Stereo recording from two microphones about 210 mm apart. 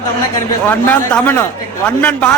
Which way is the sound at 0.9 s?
10° left (ahead or behind).